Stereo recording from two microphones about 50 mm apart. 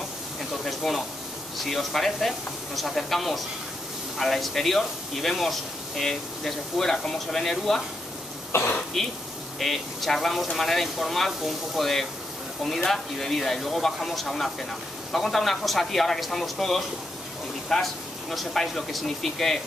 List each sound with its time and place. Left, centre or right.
0.4 s a sound: centre
1.6 s speech: centre
8.5 s speech: left
9.0 s speech: centre